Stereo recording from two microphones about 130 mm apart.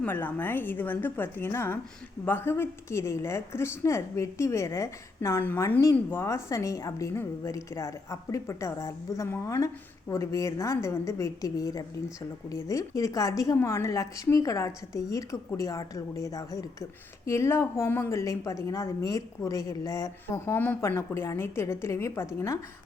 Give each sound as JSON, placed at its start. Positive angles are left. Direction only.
{"t": 0.0, "sound": "a woman's voice", "side_deg": 15}